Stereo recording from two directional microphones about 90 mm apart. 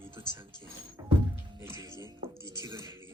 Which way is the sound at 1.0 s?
40° right (ahead or behind).